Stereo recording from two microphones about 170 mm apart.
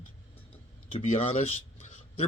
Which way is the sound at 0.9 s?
35° left (ahead or behind).